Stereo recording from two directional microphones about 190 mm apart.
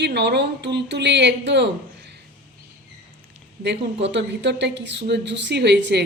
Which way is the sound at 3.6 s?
65° right (ahead or behind).